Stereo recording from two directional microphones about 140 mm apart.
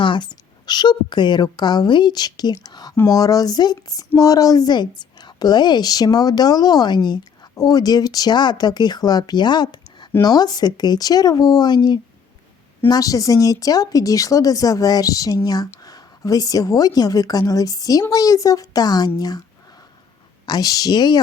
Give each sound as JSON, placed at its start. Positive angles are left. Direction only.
{"t": 0.0, "sound": "a woman's voice", "side_deg": 35}
{"t": 20.5, "sound": "speech", "side_deg": 25}